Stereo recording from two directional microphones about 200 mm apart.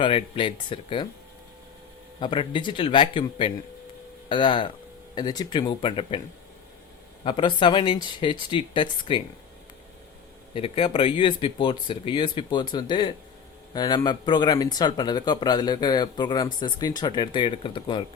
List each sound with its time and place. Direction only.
0.0 s speech: 25° left (ahead or behind)
2.2 s speech: 25° left (ahead or behind)
7.3 s speech: 25° left (ahead or behind)
10.5 s speech: 25° left (ahead or behind)